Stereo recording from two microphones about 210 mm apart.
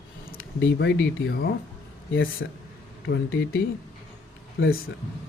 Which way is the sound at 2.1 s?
70° left (ahead or behind).